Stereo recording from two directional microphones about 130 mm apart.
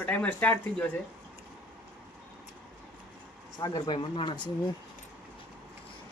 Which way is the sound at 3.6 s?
35° left (ahead or behind).